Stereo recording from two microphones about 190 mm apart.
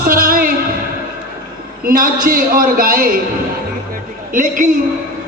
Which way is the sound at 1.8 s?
50° right (ahead or behind).